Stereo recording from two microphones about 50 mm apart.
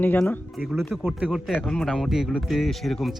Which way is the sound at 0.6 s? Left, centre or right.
Centre.